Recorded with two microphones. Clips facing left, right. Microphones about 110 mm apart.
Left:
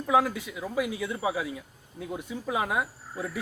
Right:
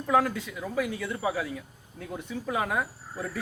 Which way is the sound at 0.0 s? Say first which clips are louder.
Even; 5° left (ahead or behind).